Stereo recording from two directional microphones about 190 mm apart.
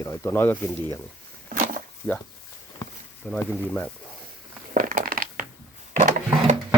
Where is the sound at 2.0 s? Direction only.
5° left (ahead or behind).